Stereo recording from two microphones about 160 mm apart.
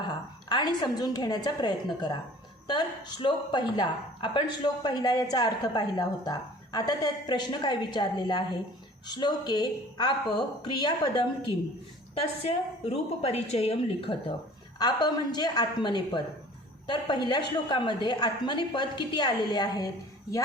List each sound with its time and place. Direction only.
0.1 s a woman's voice: 25° left (ahead or behind)